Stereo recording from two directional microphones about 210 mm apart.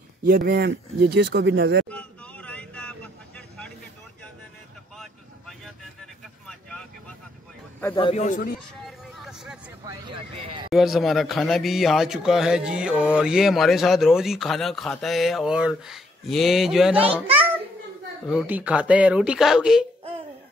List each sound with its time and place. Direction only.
0.2 s speech: 45° right (ahead or behind)
1.9 s vehicle: 5° left (ahead or behind)
6.4 s vehicle: 5° left (ahead or behind)
7.9 s a man's voice: 30° left (ahead or behind)
8.8 s vehicle: centre (ahead or behind)
9.8 s speech: 20° right (ahead or behind)
10.7 s speech: centre (ahead or behind)
18.3 s speech: 5° right (ahead or behind)